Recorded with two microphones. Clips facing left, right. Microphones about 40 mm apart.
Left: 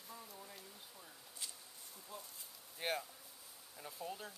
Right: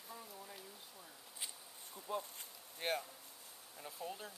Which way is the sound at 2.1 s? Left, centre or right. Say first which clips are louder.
Right 11 dB; right.